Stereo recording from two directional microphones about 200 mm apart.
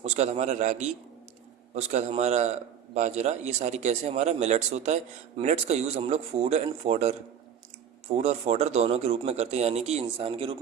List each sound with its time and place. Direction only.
0.0 s a man's voice: 35° right (ahead or behind)